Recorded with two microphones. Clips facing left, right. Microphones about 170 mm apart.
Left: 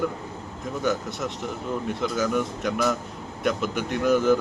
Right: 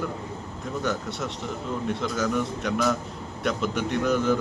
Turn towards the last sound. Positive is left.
turn(degrees=5)  # may be behind; listen again after turning